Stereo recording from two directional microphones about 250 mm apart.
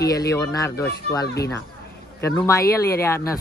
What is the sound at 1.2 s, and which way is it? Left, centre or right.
Speech, left.